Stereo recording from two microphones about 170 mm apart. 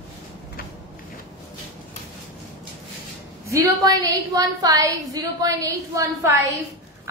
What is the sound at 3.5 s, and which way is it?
A woman's voice, 20° right (ahead or behind).